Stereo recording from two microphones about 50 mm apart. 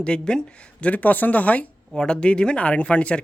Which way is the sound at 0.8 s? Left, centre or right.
Left.